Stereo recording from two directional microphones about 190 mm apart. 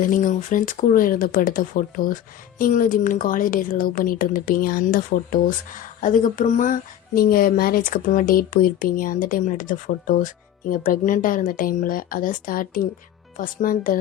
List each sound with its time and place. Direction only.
0.0 s speech: 45° left (ahead or behind)